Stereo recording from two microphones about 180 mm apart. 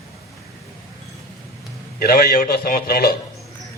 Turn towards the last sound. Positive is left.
turn(degrees=60)  # may be behind; listen again after turning